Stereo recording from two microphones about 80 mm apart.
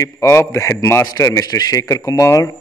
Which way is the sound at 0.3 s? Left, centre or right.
Left.